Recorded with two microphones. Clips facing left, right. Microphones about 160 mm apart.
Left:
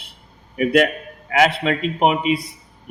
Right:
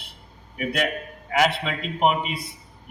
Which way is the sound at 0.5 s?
90° left.